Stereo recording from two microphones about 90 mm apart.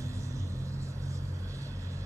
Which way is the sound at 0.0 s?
35° right (ahead or behind).